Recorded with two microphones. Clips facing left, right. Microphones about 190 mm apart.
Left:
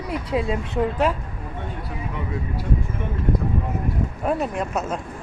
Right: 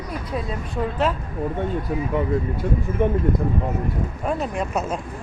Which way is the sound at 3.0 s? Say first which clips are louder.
Right 10 dB; 50° right (ahead or behind).